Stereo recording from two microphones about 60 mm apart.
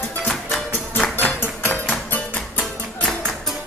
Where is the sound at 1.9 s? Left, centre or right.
Left.